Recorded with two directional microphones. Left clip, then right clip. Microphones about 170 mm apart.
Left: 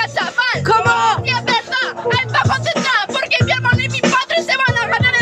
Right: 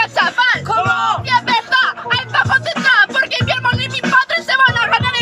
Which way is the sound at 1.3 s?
Centre (ahead or behind).